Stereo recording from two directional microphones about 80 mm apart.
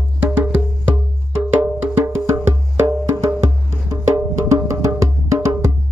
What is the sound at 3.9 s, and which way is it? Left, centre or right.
Music, right.